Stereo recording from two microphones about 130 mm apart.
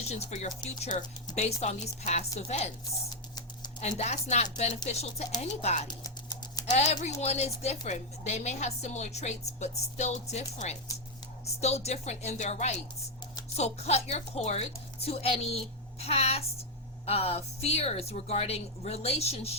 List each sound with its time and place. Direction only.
0.1 s a woman's voice: 60° left (ahead or behind)
1.4 s a woman's voice: 55° left (ahead or behind)
3.8 s a woman's voice: 60° left (ahead or behind)
5.9 s a sound: 30° left (ahead or behind)
6.7 s a woman's voice: 60° left (ahead or behind)